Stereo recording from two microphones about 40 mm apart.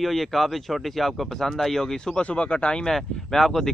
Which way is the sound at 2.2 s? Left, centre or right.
Left.